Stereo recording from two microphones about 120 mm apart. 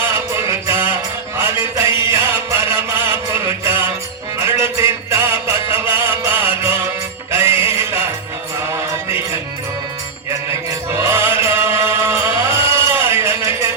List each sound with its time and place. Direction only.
0.0 s music: 25° right (ahead or behind)
1.8 s chant: 20° right (ahead or behind)
3.4 s music: 20° right (ahead or behind)
7.3 s music: 20° right (ahead or behind)
11.0 s music: 25° right (ahead or behind)